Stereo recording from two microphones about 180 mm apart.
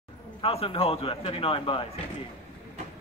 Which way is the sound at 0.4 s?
30° left (ahead or behind).